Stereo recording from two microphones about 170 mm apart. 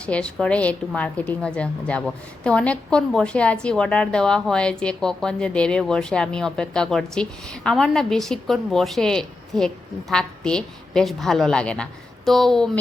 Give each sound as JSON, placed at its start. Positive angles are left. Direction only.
{"t": 0.0, "sound": "a woman's voice", "side_deg": 5}